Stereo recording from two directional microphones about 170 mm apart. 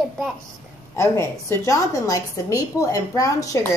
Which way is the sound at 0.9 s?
15° left (ahead or behind).